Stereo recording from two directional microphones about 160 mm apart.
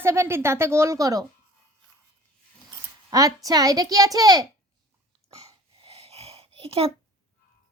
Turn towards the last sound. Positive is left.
turn(degrees=-35)  # may be behind; listen again after turning